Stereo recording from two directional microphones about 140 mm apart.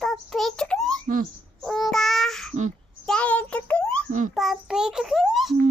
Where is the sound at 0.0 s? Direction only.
Centre (ahead or behind).